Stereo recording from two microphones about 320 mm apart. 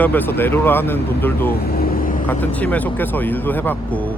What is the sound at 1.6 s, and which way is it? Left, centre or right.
Vehicle, left.